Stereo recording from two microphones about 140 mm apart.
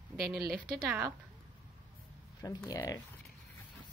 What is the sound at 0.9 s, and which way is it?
Speech, 20° right (ahead or behind).